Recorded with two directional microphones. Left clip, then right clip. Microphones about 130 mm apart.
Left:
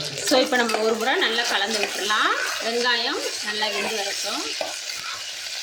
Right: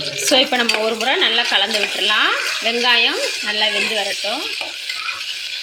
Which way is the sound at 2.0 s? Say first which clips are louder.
Right 5 dB; 10° right (ahead or behind).